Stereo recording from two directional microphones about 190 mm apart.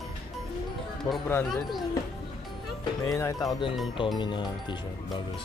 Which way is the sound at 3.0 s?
15° left (ahead or behind).